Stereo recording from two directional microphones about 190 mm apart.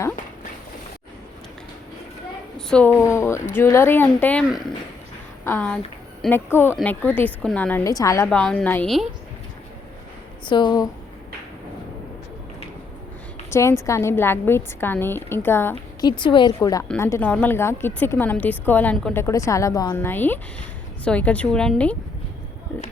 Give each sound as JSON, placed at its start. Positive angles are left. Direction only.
{"t": 2.6, "sound": "a woman's voice", "side_deg": 5}
{"t": 7.9, "sound": "a woman's voice", "side_deg": 15}
{"t": 8.3, "sound": "a woman's voice", "side_deg": 5}
{"t": 10.4, "sound": "a woman's voice", "side_deg": 25}
{"t": 13.5, "sound": "a woman's voice", "side_deg": 15}
{"t": 16.0, "sound": "a woman's voice", "side_deg": 25}